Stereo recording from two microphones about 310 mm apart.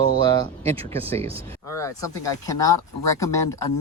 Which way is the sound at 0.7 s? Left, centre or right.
Centre.